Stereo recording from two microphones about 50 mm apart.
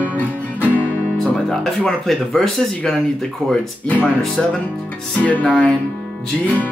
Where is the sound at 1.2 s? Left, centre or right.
Centre.